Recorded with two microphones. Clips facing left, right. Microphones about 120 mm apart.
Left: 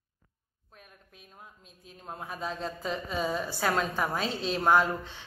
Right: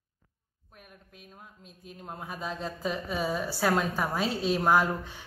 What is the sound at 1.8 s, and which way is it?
A woman's voice, centre (ahead or behind).